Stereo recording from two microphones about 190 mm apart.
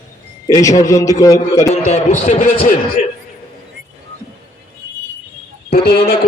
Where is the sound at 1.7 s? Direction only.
40° left (ahead or behind).